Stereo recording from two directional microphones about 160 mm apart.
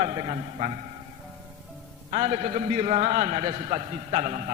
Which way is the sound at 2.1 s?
40° right (ahead or behind).